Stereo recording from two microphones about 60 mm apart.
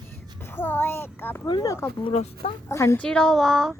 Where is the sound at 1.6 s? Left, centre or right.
Left.